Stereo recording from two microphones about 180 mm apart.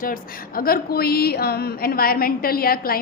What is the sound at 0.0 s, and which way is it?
A woman's voice, 55° left (ahead or behind).